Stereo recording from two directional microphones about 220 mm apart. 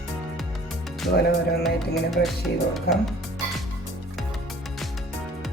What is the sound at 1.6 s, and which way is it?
Music, centre (ahead or behind).